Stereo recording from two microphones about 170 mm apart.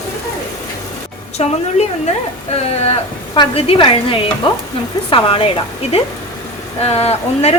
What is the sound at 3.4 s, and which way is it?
Speech, 30° left (ahead or behind).